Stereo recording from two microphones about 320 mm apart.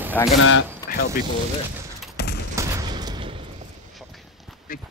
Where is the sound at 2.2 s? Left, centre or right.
Left.